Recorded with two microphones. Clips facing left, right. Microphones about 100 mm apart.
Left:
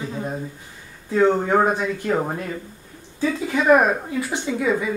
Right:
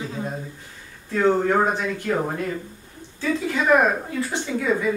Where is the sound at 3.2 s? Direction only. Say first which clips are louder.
Left 2 dB; 10° left (ahead or behind).